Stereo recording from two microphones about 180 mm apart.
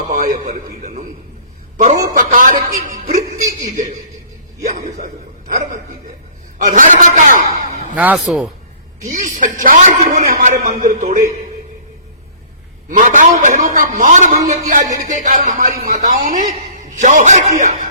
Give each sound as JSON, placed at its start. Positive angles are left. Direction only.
{"t": 0.0, "sound": "a sound", "side_deg": -45}
{"t": 1.8, "sound": "a man's voice", "side_deg": -40}
{"t": 6.7, "sound": "a man's voice", "side_deg": -45}
{"t": 7.6, "sound": "a sound", "side_deg": -40}
{"t": 7.9, "sound": "speech", "side_deg": -10}
{"t": 9.0, "sound": "a man's voice", "side_deg": -45}
{"t": 12.9, "sound": "a man's voice", "side_deg": -45}